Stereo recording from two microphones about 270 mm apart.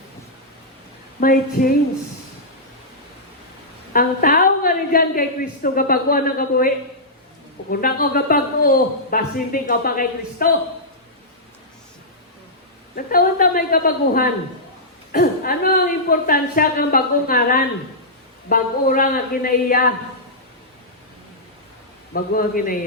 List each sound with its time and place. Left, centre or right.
1.2 s a man's voice: left
3.9 s a man's voice: left
7.7 s a man's voice: left
13.1 s a man's voice: left
22.1 s a man's voice: left